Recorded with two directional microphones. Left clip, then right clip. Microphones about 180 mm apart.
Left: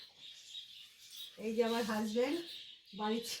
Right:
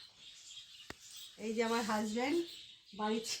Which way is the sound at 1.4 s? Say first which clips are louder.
Left 1 dB; 15° right (ahead or behind).